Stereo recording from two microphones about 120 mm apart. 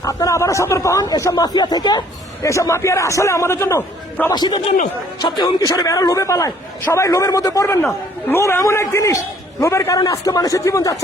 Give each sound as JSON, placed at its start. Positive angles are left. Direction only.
{"t": 0.0, "sound": "speech", "side_deg": 30}
{"t": 4.3, "sound": "a man's voice", "side_deg": 35}